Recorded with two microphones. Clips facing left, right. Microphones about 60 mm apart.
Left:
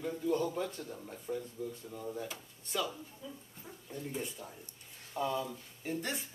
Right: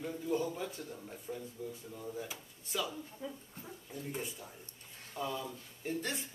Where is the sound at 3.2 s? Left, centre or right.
Right.